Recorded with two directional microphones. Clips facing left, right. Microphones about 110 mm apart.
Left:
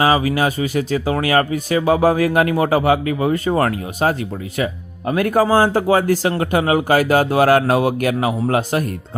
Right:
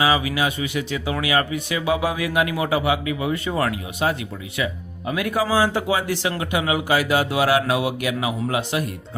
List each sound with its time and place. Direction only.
0.0 s speech: 45° left (ahead or behind)